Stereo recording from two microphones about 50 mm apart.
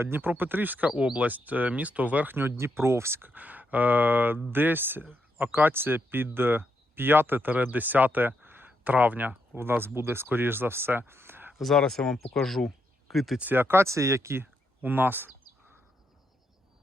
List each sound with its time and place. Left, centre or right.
0.0 s speech: right
2.3 s speech: right
3.2 s speech: right
9.6 s speech: right
11.5 s speech: centre
13.4 s speech: right
13.8 s speech: right
14.8 s speech: right